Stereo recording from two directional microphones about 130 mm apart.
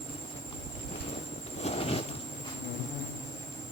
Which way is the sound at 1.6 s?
50° left (ahead or behind).